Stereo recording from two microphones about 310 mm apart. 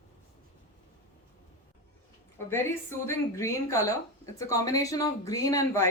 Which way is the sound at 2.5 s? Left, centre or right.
Centre.